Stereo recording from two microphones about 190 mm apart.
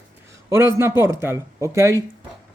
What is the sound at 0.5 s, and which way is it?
Speech, 15° right (ahead or behind).